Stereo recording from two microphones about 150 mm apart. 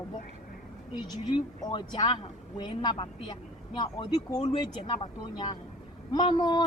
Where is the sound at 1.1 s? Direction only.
30° left (ahead or behind).